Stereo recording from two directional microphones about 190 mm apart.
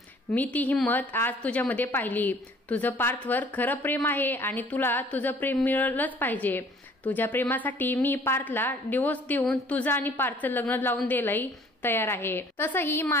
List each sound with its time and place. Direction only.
0.3 s a woman's voice: 10° left (ahead or behind)